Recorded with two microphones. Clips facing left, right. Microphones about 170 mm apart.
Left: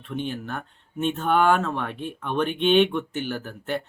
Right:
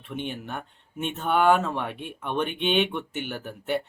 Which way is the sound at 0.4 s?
15° right (ahead or behind).